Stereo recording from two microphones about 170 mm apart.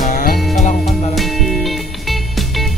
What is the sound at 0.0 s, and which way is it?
Music, 50° left (ahead or behind).